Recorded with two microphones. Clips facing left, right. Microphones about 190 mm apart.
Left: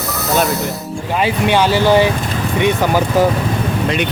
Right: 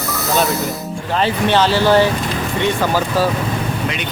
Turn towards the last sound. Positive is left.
turn(degrees=15)  # may be behind; listen again after turning